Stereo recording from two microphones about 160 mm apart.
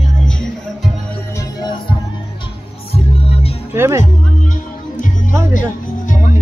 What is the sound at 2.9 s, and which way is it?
Music, 40° left (ahead or behind).